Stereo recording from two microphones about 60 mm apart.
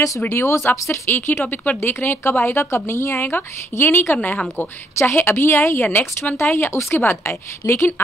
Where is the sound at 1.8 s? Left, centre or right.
Left.